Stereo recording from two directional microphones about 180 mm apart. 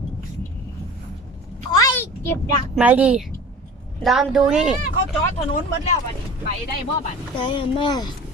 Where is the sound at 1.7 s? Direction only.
15° left (ahead or behind).